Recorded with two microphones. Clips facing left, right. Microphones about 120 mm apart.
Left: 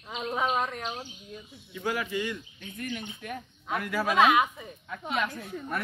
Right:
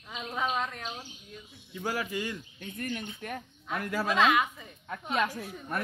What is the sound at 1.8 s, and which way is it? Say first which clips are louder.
A man's voice: left 2 dB; 35° right (ahead or behind).